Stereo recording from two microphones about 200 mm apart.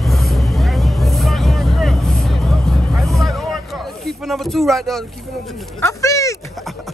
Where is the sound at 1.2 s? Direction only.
Centre (ahead or behind).